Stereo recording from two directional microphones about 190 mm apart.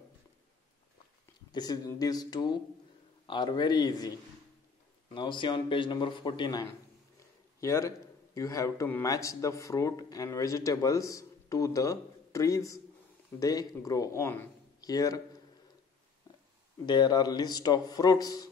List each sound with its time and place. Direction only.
1.5 s a man's voice: 20° left (ahead or behind)
7.2 s a sound: 15° left (ahead or behind)
8.4 s speech: 15° left (ahead or behind)
16.8 s a man's voice: 20° left (ahead or behind)